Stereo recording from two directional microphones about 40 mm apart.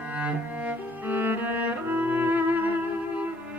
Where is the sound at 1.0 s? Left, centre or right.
Right.